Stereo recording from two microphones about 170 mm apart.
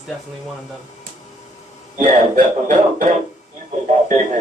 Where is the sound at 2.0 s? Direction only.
50° right (ahead or behind).